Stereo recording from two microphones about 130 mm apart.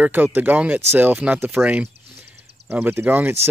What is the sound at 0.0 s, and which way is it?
Speech, 15° right (ahead or behind).